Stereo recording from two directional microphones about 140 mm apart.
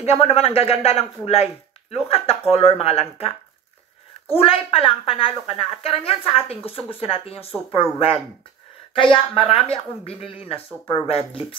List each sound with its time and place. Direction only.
0.0 s speech: 45° left (ahead or behind)
4.4 s speech: 40° left (ahead or behind)
9.1 s speech: 40° left (ahead or behind)